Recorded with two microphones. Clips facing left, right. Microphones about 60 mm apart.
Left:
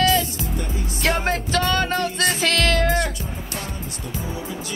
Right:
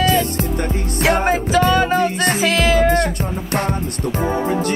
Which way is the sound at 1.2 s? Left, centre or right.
Centre.